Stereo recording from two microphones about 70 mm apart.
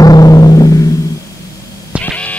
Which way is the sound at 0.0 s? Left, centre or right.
Left.